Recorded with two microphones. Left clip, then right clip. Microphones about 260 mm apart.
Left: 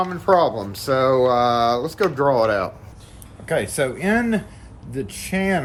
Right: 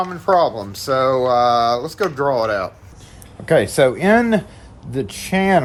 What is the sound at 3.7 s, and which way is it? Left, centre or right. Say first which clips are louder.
Speech: right 7 dB; right.